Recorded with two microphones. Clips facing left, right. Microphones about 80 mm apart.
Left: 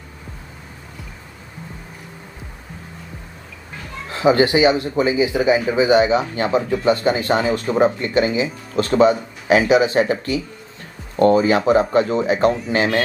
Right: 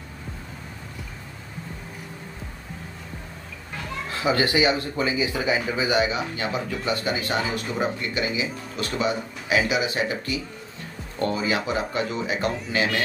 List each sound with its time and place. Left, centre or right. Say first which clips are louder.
4.1 s speech: left 8 dB; left